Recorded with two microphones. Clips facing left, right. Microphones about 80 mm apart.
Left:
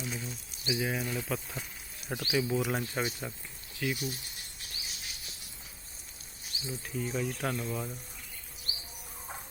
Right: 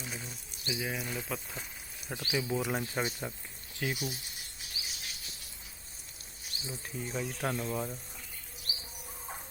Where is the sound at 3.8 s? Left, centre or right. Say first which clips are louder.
Left 2 dB; right.